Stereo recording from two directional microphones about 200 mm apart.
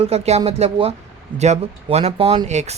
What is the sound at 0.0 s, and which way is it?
Speech, 30° right (ahead or behind).